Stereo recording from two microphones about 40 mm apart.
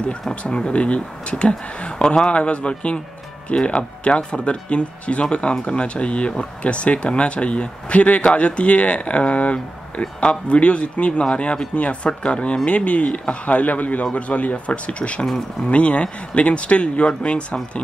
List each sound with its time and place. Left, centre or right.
0.3 s speech: left
2.3 s speech: left
15.2 s speech: centre
15.7 s speech: left